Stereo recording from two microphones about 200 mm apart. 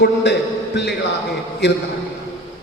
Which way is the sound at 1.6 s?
60° left (ahead or behind).